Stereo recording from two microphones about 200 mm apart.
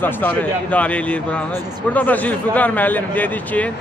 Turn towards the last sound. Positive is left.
turn(degrees=10)  # may be behind; listen again after turning